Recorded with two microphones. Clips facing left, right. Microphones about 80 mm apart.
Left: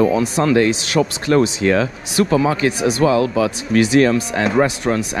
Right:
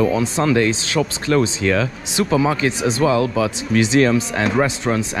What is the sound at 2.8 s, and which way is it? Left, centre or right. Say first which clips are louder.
Speech: left 2 dB; right.